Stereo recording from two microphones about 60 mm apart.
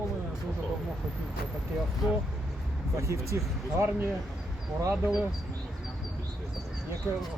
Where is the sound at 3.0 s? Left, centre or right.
Right.